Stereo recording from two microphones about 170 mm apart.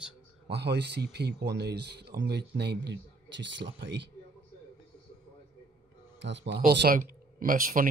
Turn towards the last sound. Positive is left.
turn(degrees=-55)  # may be behind; listen again after turning